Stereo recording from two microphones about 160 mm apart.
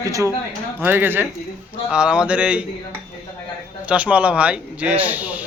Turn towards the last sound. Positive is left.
turn(degrees=-10)  # may be behind; listen again after turning